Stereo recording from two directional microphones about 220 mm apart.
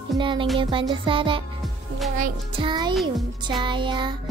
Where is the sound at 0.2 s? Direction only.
20° right (ahead or behind).